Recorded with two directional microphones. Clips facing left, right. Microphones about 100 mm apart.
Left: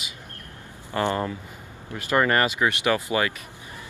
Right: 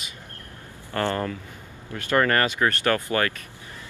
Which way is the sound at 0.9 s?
15° left (ahead or behind).